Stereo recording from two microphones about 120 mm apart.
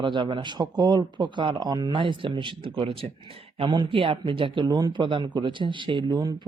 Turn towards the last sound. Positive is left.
turn(degrees=-35)  # may be behind; listen again after turning